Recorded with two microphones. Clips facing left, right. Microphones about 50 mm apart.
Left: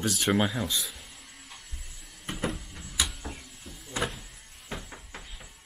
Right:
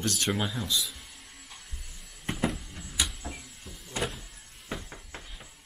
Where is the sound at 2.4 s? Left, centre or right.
Centre.